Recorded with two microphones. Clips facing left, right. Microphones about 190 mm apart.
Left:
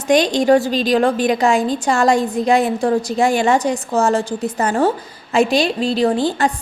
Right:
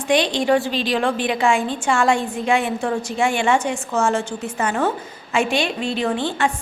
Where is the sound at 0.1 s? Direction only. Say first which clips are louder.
Left 5 dB; 40° left (ahead or behind).